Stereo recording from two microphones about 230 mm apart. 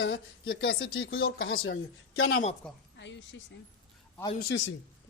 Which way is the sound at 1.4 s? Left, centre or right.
Left.